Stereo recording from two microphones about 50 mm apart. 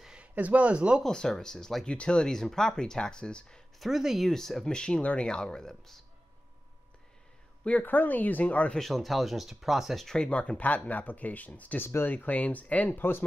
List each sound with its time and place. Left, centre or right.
0.0 s a sound: centre
0.3 s speech: right
1.0 s speech: centre
1.9 s speech: centre
3.8 s speech: centre
4.3 s speech: centre
7.8 s speech: left
8.7 s speech: centre
10.0 s speech: centre; by 11.8 s left
11.8 s speech: left
12.1 s speech: left